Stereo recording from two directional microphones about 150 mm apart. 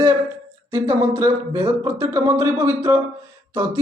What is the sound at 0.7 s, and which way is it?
A man's voice, 20° right (ahead or behind).